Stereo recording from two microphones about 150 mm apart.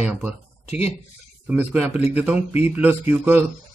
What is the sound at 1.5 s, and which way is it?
Speech, 10° right (ahead or behind).